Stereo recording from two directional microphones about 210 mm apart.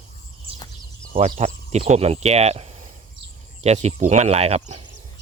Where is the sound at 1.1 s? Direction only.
30° right (ahead or behind).